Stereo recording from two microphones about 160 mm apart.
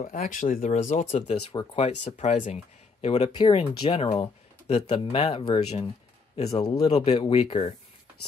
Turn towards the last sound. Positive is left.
turn(degrees=40)  # may be behind; listen again after turning